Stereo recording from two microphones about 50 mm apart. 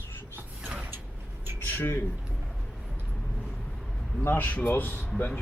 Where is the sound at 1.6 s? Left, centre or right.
Left.